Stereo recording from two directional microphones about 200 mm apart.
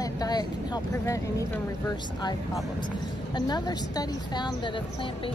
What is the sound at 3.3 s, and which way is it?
Speech, 20° left (ahead or behind).